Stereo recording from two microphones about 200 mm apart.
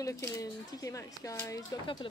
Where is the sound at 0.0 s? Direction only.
15° left (ahead or behind).